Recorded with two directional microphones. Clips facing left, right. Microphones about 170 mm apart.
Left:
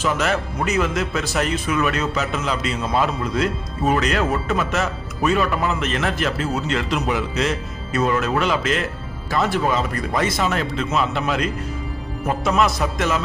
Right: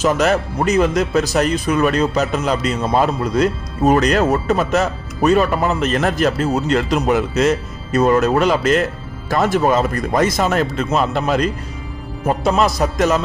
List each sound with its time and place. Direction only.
0.0 s speech: 40° right (ahead or behind)